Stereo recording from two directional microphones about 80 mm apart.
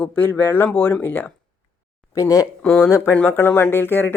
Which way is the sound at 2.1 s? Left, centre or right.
Left.